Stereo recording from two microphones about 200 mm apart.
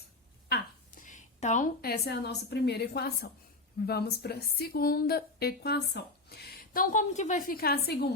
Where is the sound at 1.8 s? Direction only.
50° left (ahead or behind).